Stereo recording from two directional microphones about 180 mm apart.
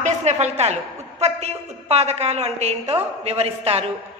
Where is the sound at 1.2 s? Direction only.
35° right (ahead or behind).